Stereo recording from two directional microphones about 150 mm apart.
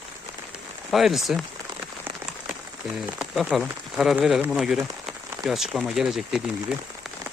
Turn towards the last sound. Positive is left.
turn(degrees=-5)  # may be behind; listen again after turning